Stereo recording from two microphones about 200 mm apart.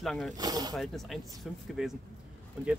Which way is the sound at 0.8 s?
Centre (ahead or behind).